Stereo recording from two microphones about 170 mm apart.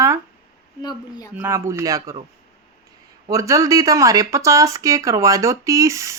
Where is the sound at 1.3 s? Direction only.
15° right (ahead or behind).